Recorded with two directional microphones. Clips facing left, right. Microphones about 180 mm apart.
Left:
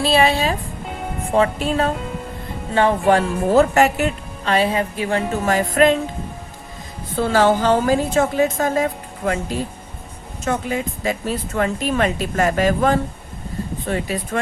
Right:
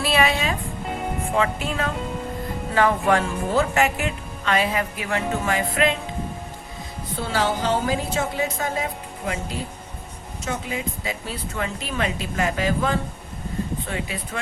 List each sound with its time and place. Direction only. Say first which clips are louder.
0.0 s speech: left 5 dB; 30° left (ahead or behind)
7.2 s speech: left 8 dB; 50° left (ahead or behind)
10.4 s speech: left 6 dB; 50° left (ahead or behind)